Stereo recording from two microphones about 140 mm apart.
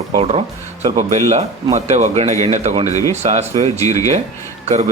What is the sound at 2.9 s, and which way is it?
Speech, 25° left (ahead or behind).